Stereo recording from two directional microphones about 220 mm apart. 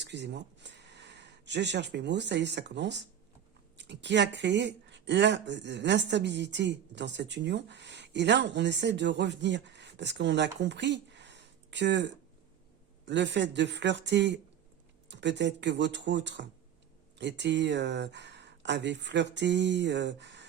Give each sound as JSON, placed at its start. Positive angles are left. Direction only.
{"t": 0.0, "sound": "a woman's voice", "side_deg": -50}